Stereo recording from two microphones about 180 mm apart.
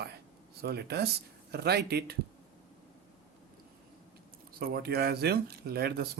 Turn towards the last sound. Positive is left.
turn(degrees=-60)  # may be behind; listen again after turning